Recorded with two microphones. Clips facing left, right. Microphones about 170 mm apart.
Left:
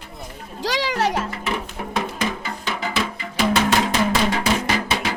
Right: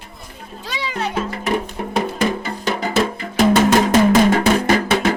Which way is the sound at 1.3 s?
35° right (ahead or behind).